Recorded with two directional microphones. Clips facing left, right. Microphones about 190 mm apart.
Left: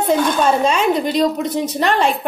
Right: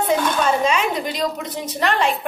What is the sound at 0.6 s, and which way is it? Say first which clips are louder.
Speech: left 4 dB; 35° left (ahead or behind).